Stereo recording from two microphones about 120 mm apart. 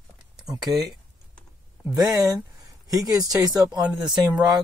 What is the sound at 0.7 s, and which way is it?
Speech, 35° right (ahead or behind).